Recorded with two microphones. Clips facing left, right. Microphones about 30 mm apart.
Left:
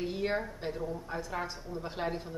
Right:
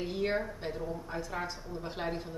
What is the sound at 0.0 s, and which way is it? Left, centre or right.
Speech, centre.